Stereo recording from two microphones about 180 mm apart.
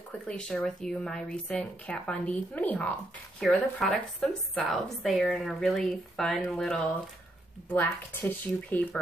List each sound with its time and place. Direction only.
0.3 s speech: 5° left (ahead or behind)